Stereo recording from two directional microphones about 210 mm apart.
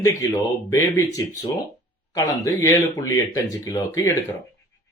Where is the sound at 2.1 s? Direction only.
15° left (ahead or behind).